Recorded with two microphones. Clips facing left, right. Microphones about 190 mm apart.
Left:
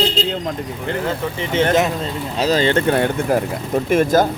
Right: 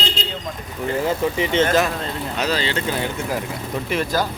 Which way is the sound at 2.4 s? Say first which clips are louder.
Left 7 dB; 45° left (ahead or behind).